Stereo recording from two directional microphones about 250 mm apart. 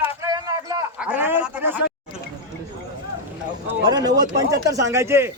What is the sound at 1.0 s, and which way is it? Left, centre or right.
Speech, centre.